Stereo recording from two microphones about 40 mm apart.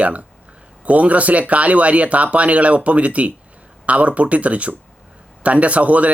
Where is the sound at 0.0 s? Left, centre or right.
Right.